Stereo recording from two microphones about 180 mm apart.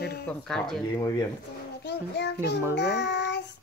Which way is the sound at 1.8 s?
70° left (ahead or behind).